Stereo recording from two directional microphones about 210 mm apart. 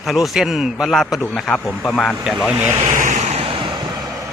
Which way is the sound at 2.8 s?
35° right (ahead or behind).